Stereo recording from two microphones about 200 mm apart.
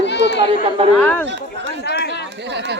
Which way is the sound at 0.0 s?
60° left (ahead or behind).